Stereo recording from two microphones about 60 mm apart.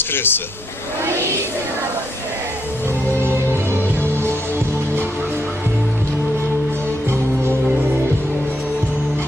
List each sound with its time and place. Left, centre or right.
0.1 s speech: left
3.2 s music: right